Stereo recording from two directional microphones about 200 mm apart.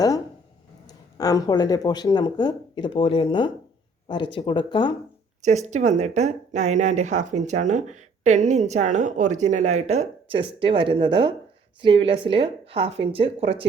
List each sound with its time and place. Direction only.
1.2 s speech: 20° left (ahead or behind)
5.4 s speech: 35° right (ahead or behind)